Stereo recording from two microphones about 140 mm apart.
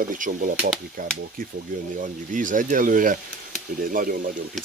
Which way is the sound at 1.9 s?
70° right (ahead or behind).